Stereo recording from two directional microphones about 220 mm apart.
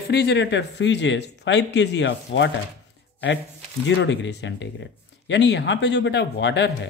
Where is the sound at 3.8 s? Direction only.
55° left (ahead or behind).